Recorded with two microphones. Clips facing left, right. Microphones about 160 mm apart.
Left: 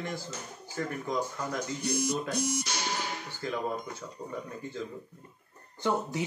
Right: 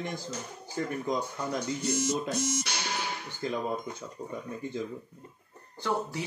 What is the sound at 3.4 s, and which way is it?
Speech, 20° right (ahead or behind).